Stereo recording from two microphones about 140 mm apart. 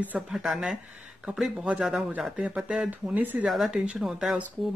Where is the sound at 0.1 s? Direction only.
5° right (ahead or behind).